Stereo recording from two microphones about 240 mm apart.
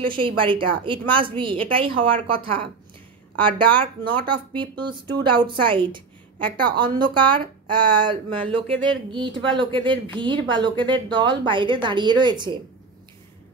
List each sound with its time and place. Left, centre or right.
0.1 s a woman's voice: right
3.3 s a woman's voice: right